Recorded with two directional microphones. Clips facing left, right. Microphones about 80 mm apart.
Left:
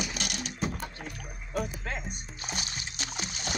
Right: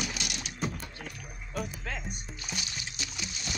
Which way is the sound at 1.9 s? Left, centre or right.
Left.